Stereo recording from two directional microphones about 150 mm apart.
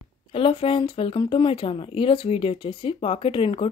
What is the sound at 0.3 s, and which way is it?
Speech, 40° left (ahead or behind).